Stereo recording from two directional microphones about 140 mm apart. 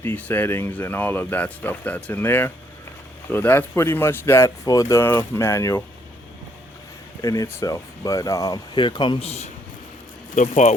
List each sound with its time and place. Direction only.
0.0 s speech: 15° left (ahead or behind)
7.2 s speech: 25° left (ahead or behind); by 9.5 s 45° left (ahead or behind)
10.3 s speech: 60° left (ahead or behind)